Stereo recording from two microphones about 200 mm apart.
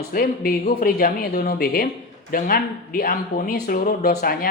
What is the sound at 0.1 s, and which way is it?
A man's voice, 50° left (ahead or behind).